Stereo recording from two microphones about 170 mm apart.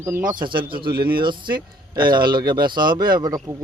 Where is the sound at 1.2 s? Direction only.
25° right (ahead or behind).